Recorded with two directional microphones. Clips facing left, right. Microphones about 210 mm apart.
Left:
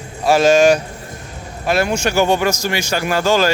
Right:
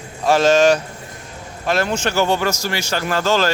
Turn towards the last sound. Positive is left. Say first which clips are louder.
# left 2 dB
turn(degrees=10)  # may be behind; listen again after turning